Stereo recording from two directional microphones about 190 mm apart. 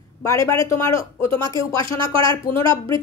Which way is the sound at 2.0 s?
25° right (ahead or behind).